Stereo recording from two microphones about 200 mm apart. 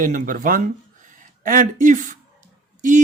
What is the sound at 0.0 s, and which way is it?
Speech, 45° right (ahead or behind).